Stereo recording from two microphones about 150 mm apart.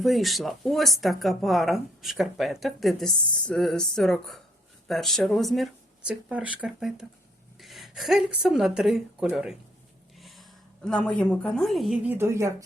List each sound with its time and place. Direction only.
0.0 s a woman's voice: centre (ahead or behind)
12.0 s a woman's voice: 15° right (ahead or behind)